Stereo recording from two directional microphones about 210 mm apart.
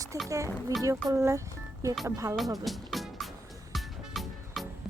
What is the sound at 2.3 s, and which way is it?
Music, centre (ahead or behind).